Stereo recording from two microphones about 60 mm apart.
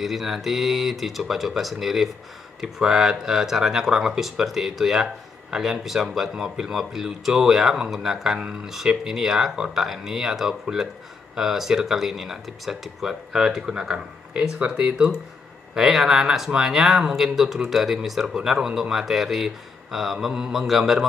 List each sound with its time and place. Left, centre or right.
0.0 s a man's voice: centre
15.7 s a man's voice: centre